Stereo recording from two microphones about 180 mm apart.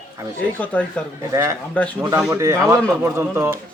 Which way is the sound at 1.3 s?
15° right (ahead or behind).